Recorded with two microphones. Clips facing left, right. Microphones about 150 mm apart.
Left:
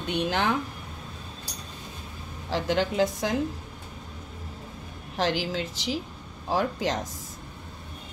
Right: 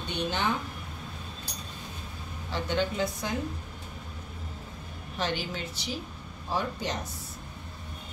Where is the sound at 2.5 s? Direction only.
90° left.